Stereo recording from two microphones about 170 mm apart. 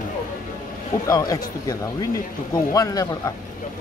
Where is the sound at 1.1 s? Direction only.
20° left (ahead or behind).